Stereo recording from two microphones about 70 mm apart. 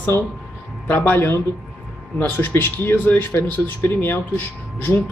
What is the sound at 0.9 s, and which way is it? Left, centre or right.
Speech, left.